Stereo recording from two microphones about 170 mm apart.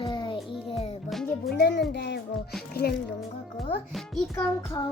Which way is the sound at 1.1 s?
Centre (ahead or behind).